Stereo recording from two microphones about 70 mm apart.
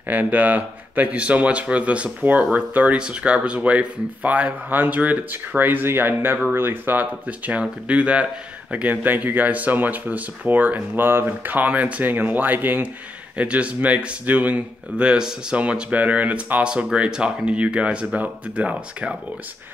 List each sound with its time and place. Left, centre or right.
0.1 s a man's voice: right